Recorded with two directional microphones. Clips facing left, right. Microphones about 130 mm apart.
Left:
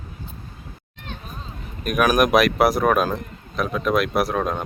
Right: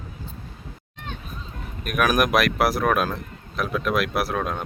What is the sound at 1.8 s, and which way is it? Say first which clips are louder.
A man's voice: left 3 dB; centre (ahead or behind).